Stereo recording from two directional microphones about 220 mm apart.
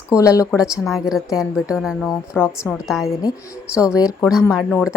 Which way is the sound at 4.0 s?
15° left (ahead or behind).